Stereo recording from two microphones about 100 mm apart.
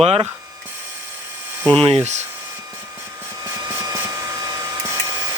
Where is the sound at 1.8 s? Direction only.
85° right.